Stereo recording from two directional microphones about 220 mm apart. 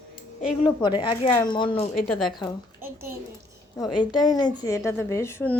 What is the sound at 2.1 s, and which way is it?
Speech, centre (ahead or behind).